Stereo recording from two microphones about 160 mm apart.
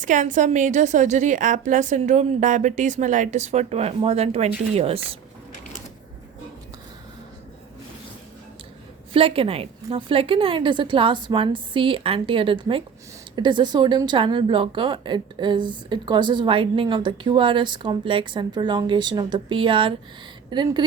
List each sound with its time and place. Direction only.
0.0 s a woman's voice: 50° right (ahead or behind)
9.1 s a woman's voice: 35° right (ahead or behind)